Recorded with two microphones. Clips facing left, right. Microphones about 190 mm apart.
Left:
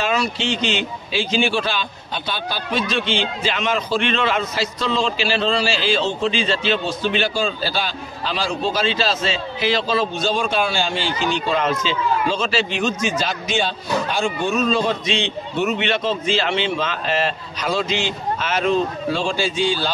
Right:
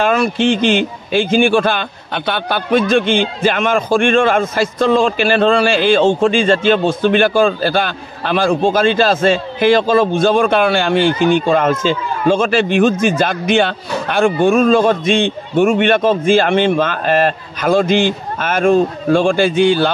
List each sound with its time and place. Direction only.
0.0 s a man's voice: 50° right (ahead or behind)